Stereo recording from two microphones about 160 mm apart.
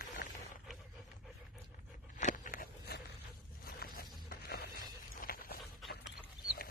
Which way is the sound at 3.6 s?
70° left (ahead or behind).